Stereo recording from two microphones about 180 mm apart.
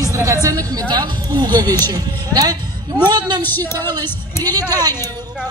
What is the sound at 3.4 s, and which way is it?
Speech, 10° left (ahead or behind).